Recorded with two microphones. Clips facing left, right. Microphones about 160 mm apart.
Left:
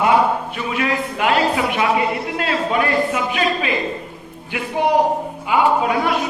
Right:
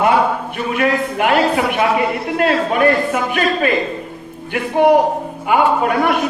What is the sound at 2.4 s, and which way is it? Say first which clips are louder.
A man's voice: right 6 dB; 50° right (ahead or behind).